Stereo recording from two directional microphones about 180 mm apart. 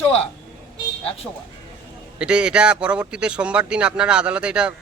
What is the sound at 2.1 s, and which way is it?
Speech, 5° right (ahead or behind).